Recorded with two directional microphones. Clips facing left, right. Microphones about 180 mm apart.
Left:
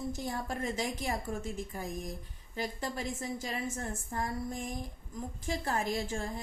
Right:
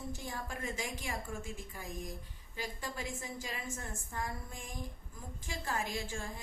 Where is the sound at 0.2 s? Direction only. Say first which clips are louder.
Left 6 dB; 40° left (ahead or behind).